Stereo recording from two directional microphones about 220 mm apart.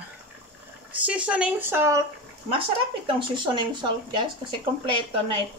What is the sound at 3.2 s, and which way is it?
Speech, 20° right (ahead or behind).